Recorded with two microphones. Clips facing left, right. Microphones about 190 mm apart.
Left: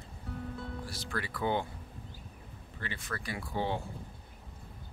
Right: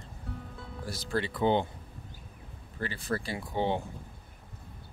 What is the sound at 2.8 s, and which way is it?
Speech, 35° right (ahead or behind).